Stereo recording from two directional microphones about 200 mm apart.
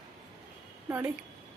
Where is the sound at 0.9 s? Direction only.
10° right (ahead or behind).